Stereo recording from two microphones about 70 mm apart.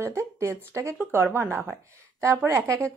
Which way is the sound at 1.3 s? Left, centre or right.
Right.